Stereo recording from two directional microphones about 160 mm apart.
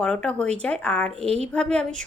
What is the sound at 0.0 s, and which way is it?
A woman's voice, 5° left (ahead or behind).